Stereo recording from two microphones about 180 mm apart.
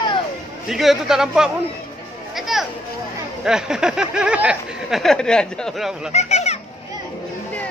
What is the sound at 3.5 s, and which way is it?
Speech, 5° right (ahead or behind).